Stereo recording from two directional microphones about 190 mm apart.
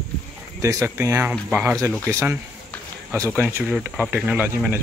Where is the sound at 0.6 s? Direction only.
15° right (ahead or behind).